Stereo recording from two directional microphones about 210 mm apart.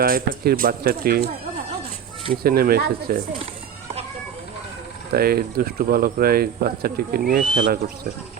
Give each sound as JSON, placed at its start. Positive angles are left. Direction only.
{"t": 0.0, "sound": "speech", "side_deg": -45}
{"t": 2.3, "sound": "speech", "side_deg": -45}
{"t": 5.1, "sound": "speech", "side_deg": -45}